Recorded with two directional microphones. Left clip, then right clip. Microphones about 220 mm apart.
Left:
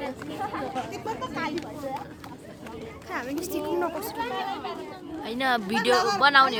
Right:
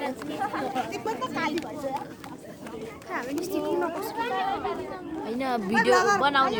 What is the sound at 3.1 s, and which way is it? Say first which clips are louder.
Speech: even; 45° left (ahead or behind).